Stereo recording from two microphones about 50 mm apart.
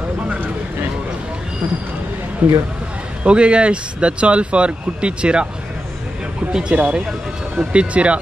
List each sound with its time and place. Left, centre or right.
2.4 s speech: right
3.3 s speech: right
6.5 s speech: centre